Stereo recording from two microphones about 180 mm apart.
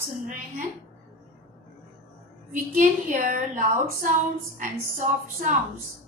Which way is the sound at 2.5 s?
45° right (ahead or behind).